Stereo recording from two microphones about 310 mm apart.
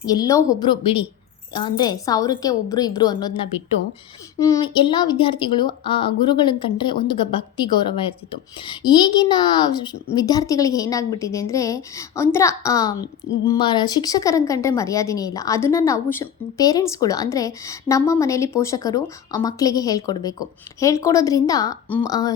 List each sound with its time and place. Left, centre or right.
0.0 s a woman's voice: centre